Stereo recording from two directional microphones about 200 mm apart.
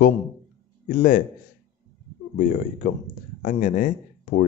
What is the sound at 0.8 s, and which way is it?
Speech, 40° left (ahead or behind).